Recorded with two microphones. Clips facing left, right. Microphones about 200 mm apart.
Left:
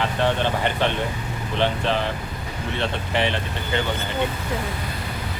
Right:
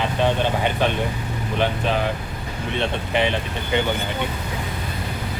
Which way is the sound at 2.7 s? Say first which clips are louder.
Right 2 dB; 15° right (ahead or behind).